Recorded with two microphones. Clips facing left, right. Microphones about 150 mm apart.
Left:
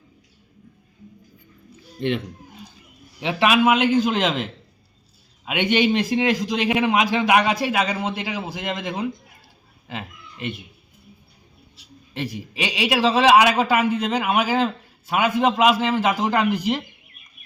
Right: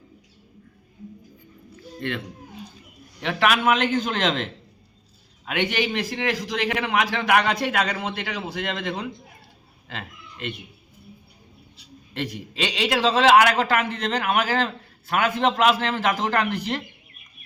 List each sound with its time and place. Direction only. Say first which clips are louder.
2.0 s a man's voice: left 6 dB; 20° left (ahead or behind)
5.5 s a man's voice: left 5 dB; 20° left (ahead or behind)
11.8 s a man's voice: left 1 dB; 5° left (ahead or behind)